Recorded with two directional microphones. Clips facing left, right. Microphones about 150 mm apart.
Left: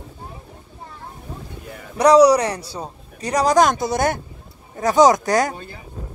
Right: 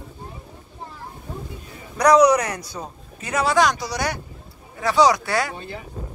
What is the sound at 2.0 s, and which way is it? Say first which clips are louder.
A man's voice: left 3 dB; 30° left (ahead or behind).